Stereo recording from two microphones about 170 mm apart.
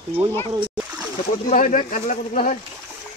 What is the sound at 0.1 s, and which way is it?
Speech, 10° right (ahead or behind).